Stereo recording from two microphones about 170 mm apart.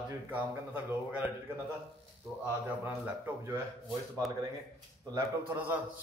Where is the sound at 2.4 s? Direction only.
10° right (ahead or behind).